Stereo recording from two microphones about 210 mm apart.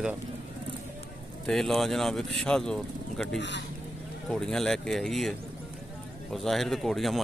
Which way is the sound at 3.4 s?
55° left (ahead or behind).